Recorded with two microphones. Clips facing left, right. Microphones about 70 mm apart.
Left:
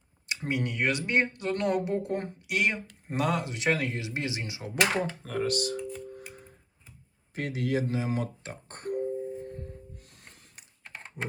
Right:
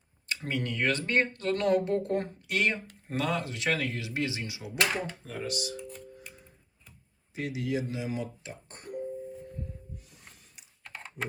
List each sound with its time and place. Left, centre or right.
0.4 s speech: centre
4.8 s speech: left
7.3 s speech: left
10.0 s music: left
10.3 s mechanisms: left
10.8 s typing: centre